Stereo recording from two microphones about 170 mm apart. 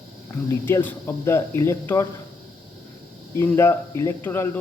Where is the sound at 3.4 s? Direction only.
15° left (ahead or behind).